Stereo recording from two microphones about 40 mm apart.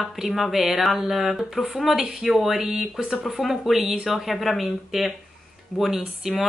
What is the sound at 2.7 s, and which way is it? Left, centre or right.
Speech, centre.